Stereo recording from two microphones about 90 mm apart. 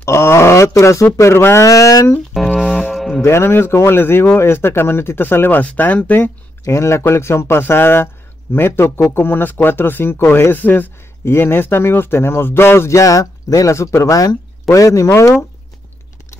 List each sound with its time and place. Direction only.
0.0 s speech: 30° left (ahead or behind)
2.3 s speech: 5° left (ahead or behind)
2.6 s mantra: 5° right (ahead or behind)
3.2 s speech: 30° left (ahead or behind)
6.6 s speech: 30° left (ahead or behind)